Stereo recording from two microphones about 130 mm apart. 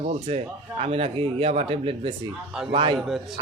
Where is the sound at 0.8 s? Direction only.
50° right (ahead or behind).